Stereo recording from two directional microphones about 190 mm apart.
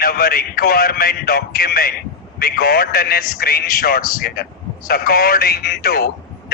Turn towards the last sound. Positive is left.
turn(degrees=55)  # may be behind; listen again after turning